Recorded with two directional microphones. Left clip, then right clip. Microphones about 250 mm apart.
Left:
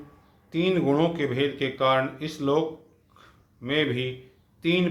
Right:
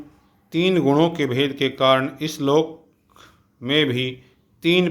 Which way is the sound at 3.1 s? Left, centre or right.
Right.